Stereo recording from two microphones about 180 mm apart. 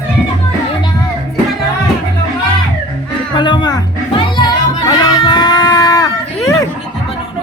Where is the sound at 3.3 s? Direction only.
25° left (ahead or behind).